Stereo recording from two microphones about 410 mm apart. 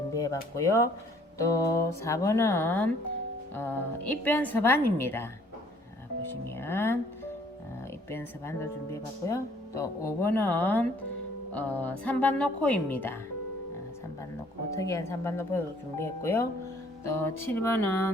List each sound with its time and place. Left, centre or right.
0.1 s music: centre
0.5 s speech: centre
6.6 s speech: centre
8.1 s speech: centre
14.7 s speech: centre
17.0 s music: centre
17.4 s speech: centre
17.8 s music: right